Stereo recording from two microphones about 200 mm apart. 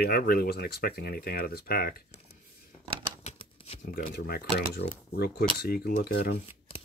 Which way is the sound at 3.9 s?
50° left (ahead or behind).